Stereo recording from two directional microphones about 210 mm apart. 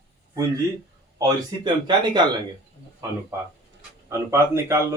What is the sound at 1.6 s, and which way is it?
A man's voice, 20° right (ahead or behind).